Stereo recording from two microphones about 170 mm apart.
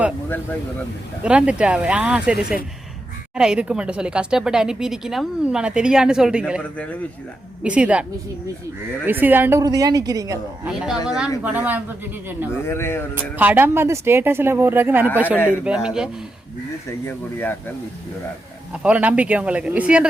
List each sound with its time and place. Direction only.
1.2 s a woman's voice: 5° right (ahead or behind)
6.6 s speech: 5° left (ahead or behind)
7.6 s speech: 5° right (ahead or behind)
9.0 s a woman's voice: 10° right (ahead or behind)
10.9 s speech: 20° left (ahead or behind)
11.4 s speech: 10° right (ahead or behind)
12.6 s speech: 15° left (ahead or behind)
13.3 s a woman's voice: 10° right (ahead or behind)
17.1 s speech: 10° left (ahead or behind)
18.7 s speech: 5° right (ahead or behind)